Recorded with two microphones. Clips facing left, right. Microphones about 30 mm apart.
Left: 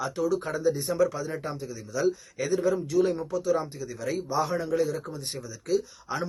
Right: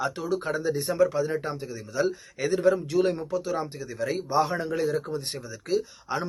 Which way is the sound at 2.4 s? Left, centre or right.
Right.